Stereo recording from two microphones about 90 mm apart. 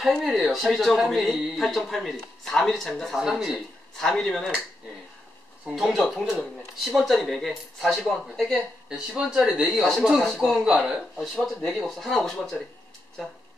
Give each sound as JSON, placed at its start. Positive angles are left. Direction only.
{"t": 0.0, "sound": "speech", "side_deg": 0}
{"t": 5.8, "sound": "speech", "side_deg": 0}